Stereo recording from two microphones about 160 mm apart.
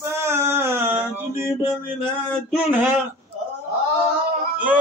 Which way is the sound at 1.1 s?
15° right (ahead or behind).